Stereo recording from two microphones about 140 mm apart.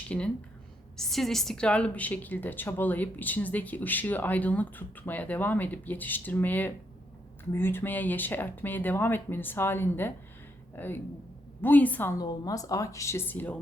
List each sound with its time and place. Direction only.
0.1 s a woman's voice: 10° left (ahead or behind)
12.1 s a woman's voice: 25° left (ahead or behind)